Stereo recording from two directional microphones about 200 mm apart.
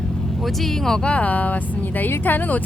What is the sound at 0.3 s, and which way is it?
Speech, centre (ahead or behind).